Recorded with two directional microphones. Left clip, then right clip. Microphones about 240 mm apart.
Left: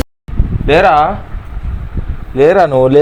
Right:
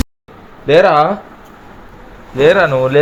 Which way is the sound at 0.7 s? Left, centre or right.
Left.